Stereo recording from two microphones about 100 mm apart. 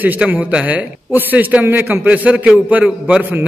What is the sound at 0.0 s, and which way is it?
A man's voice, 15° right (ahead or behind).